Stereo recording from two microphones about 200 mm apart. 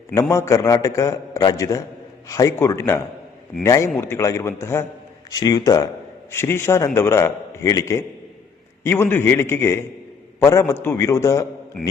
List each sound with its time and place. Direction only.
0.1 s a man's voice: 15° left (ahead or behind)